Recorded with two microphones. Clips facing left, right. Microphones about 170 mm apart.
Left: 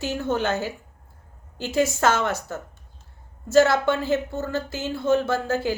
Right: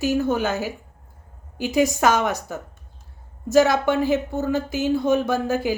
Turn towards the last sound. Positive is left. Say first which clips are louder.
# right 2 dB
turn(degrees=-15)  # may be behind; listen again after turning